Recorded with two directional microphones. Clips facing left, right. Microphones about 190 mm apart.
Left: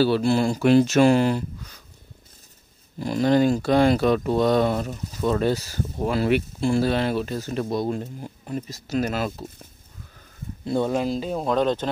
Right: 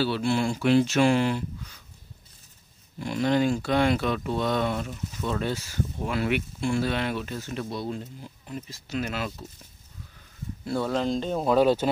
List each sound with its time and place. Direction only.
0.0 s speech: 40° left (ahead or behind)
3.0 s speech: 35° left (ahead or behind)
10.6 s speech: 20° left (ahead or behind)
11.1 s speech: 5° left (ahead or behind)